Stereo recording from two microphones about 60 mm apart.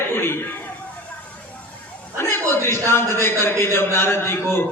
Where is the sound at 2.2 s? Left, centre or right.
Left.